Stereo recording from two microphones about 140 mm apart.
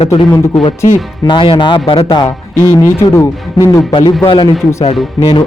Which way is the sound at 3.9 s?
30° left (ahead or behind).